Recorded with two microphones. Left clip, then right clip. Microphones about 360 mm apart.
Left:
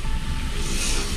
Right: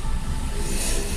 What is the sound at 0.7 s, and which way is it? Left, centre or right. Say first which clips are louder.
Vehicle: left 2 dB; right.